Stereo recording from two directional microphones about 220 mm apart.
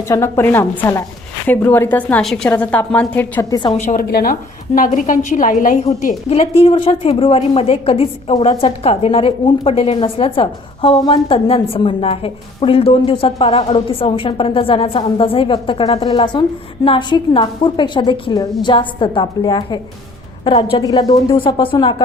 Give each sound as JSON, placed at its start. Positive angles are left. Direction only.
{"t": 0.1, "sound": "a woman's voice", "side_deg": 10}
{"t": 3.8, "sound": "a woman's voice", "side_deg": 35}